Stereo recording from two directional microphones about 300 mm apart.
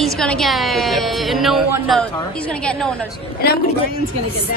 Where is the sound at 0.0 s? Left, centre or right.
Centre.